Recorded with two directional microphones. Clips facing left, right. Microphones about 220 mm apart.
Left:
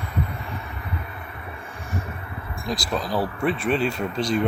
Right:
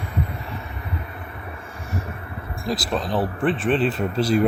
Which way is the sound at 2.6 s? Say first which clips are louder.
Right 2 dB; centre (ahead or behind).